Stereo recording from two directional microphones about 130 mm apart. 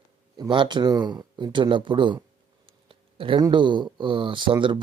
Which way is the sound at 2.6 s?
45° right (ahead or behind).